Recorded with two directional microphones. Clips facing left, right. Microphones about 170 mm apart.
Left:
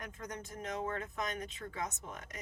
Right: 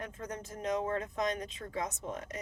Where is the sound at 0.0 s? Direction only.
30° right (ahead or behind).